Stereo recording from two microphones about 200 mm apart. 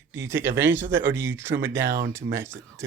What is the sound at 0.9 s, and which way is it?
Speech, 65° right (ahead or behind).